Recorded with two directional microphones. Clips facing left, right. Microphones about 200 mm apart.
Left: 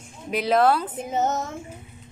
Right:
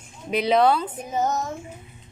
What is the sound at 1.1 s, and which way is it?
Child singing, 25° left (ahead or behind).